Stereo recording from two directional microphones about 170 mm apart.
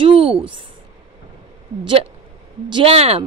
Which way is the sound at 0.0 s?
30° right (ahead or behind).